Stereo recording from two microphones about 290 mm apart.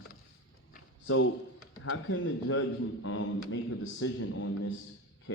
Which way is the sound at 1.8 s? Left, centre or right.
Left.